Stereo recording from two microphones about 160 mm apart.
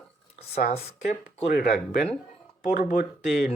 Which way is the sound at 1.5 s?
75° left (ahead or behind).